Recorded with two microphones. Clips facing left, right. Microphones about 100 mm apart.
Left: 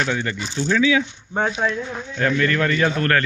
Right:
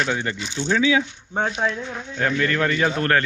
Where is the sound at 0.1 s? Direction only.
15° right (ahead or behind).